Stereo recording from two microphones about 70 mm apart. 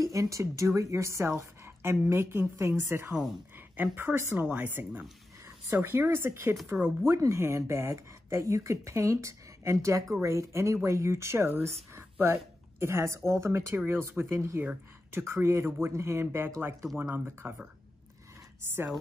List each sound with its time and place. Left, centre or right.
0.0 s a woman's voice: right